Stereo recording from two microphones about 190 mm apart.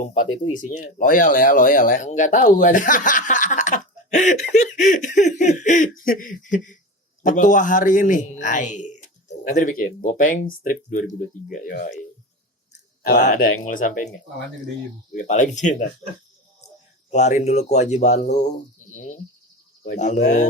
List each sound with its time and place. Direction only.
0.0 s speech: 40° left (ahead or behind)
13.0 s speech: 55° left (ahead or behind)
15.1 s speech: 40° left (ahead or behind)
17.1 s speech: 40° left (ahead or behind)